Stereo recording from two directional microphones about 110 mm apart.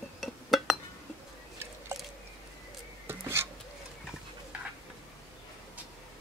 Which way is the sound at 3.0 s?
20° right (ahead or behind).